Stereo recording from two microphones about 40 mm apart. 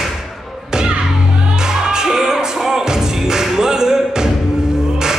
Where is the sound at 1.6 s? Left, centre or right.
Centre.